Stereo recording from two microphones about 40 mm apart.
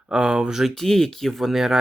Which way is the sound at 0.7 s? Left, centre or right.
Centre.